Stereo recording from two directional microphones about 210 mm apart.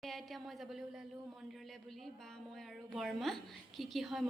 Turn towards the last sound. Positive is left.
turn(degrees=0)  # may be behind; listen again after turning